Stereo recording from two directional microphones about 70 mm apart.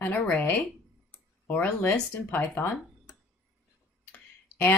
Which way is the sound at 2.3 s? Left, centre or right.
Left.